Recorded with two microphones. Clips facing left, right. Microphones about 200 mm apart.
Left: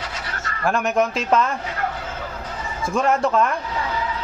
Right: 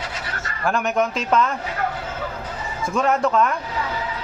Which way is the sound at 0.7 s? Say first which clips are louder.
Left 1 dB; centre (ahead or behind).